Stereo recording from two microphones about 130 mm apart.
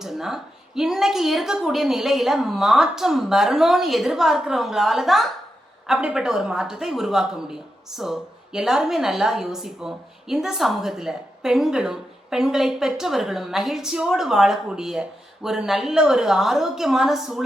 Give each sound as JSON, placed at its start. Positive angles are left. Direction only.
{"t": 0.0, "sound": "speech", "side_deg": 0}